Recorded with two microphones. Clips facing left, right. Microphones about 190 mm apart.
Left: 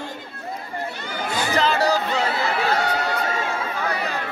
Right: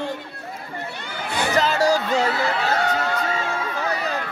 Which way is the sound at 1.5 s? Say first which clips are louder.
Right 1 dB; 45° right (ahead or behind).